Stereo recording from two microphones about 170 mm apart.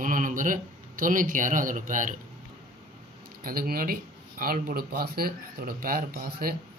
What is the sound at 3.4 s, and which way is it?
Speech, 60° right (ahead or behind).